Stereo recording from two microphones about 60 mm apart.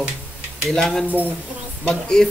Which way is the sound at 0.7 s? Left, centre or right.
Centre.